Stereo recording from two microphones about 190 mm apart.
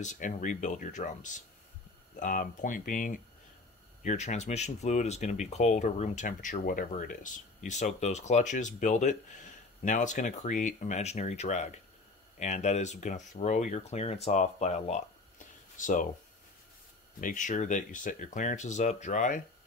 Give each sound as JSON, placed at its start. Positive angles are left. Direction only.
{"t": 0.0, "sound": "speech", "side_deg": 45}
{"t": 17.2, "sound": "speech", "side_deg": 45}